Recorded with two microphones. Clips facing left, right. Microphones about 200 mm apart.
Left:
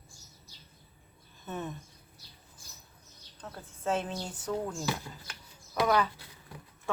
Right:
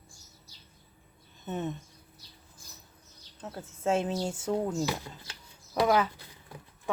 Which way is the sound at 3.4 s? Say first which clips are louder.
Right 4 dB; 25° right (ahead or behind).